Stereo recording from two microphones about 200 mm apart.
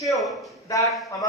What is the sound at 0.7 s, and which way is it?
Speech, 15° left (ahead or behind).